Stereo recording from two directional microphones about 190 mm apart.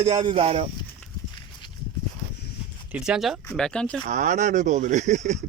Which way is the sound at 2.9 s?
5° right (ahead or behind).